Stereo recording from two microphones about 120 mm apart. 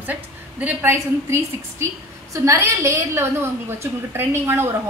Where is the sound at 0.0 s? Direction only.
15° right (ahead or behind).